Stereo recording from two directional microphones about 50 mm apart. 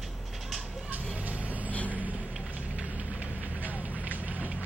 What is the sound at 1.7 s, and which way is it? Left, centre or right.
Vehicle, left.